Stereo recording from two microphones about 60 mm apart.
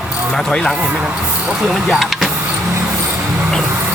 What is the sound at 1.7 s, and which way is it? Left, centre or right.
Speech, centre.